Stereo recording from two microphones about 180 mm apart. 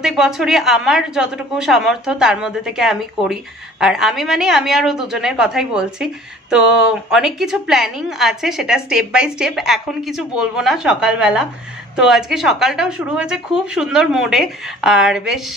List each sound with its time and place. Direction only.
0.0 s a woman's voice: centre (ahead or behind)